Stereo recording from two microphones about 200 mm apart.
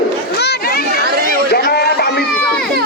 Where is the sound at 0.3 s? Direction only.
55° left (ahead or behind).